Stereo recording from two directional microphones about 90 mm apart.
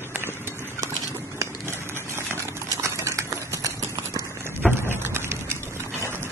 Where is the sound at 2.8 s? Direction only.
30° right (ahead or behind).